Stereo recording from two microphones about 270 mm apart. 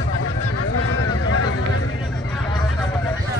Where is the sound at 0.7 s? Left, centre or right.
Left.